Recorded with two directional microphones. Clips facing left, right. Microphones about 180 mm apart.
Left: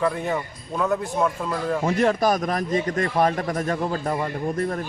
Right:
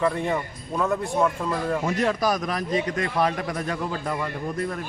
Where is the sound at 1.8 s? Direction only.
50° left (ahead or behind).